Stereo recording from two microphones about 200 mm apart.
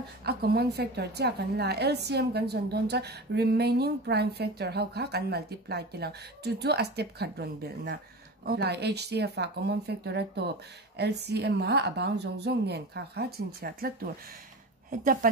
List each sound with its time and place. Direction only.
0.2 s a woman's voice: 50° right (ahead or behind)